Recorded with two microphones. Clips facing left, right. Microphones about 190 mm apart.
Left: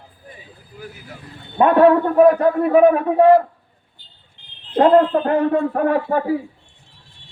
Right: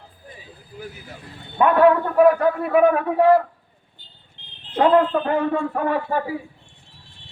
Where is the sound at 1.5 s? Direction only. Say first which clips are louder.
Left 3 dB; 35° left (ahead or behind).